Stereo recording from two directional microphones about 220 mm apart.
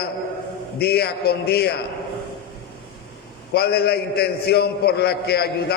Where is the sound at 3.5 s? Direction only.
45° left (ahead or behind).